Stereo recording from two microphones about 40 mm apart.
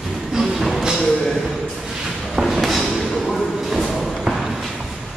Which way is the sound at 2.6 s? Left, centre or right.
Centre.